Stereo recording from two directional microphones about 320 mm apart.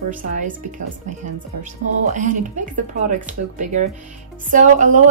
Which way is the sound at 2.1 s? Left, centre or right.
Right.